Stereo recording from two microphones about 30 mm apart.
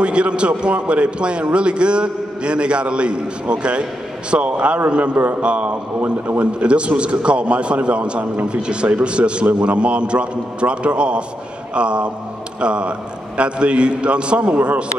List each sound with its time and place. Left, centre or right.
0.0 s a man's voice: right
4.4 s a man's voice: right
6.0 s a man's voice: right
6.6 s a man's voice: right
14.4 s a man's voice: right